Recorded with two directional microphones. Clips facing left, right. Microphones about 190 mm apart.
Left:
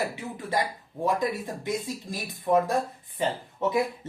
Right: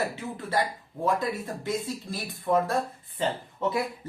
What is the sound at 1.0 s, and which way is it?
Speech, 15° left (ahead or behind).